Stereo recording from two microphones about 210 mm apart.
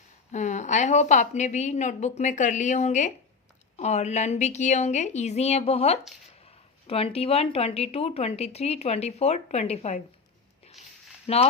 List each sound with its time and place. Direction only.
0.3 s a woman's voice: 35° left (ahead or behind)
10.8 s a sound: centre (ahead or behind)
11.3 s a woman's voice: 30° left (ahead or behind)